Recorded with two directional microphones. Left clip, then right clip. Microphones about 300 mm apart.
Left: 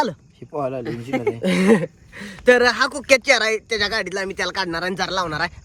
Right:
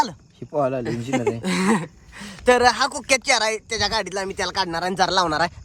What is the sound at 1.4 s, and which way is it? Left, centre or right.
Speech, centre.